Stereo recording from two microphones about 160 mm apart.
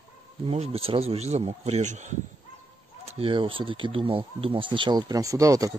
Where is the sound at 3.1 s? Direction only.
35° right (ahead or behind); by 5.8 s 20° right (ahead or behind).